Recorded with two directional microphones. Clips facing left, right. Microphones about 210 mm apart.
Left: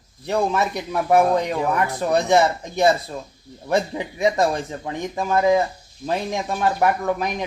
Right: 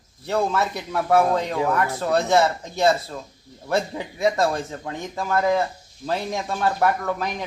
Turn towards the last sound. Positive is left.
turn(degrees=15)  # may be behind; listen again after turning